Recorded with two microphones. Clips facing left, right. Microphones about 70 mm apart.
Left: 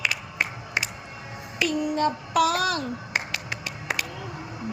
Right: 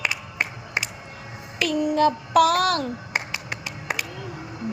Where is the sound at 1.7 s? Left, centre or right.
Right.